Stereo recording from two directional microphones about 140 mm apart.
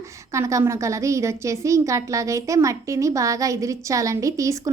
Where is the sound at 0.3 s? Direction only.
20° right (ahead or behind).